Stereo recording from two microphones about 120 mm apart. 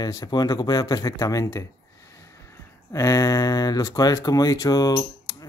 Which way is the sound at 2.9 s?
25° left (ahead or behind).